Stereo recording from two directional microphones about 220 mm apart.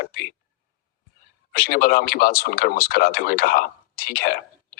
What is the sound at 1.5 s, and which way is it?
Speech, 45° left (ahead or behind).